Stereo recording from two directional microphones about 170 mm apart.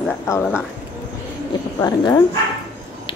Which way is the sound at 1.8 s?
20° left (ahead or behind).